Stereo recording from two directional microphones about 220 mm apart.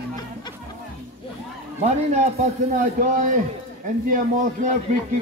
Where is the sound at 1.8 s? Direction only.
30° right (ahead or behind).